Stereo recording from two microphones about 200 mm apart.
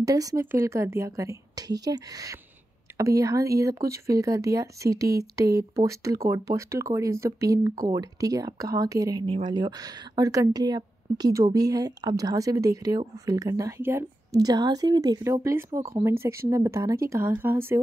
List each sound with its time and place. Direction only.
0.0 s speech: 15° right (ahead or behind)